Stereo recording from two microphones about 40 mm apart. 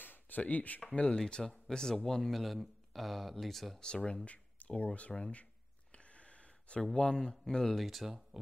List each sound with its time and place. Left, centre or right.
0.0 s a sound: left
0.4 s speech: left
0.9 s speech: left
2.3 s speech: centre
3.8 s speech: left
5.3 s a sound: left
7.0 s speech: left; by 8.1 s centre